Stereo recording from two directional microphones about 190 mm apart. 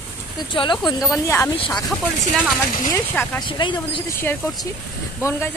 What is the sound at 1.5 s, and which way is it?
Speech, 30° left (ahead or behind).